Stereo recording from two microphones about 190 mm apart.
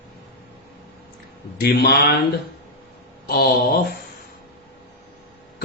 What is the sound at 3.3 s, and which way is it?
Speech, 55° left (ahead or behind).